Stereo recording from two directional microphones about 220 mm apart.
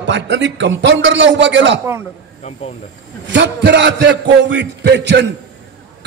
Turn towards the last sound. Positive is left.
turn(degrees=-50)  # may be behind; listen again after turning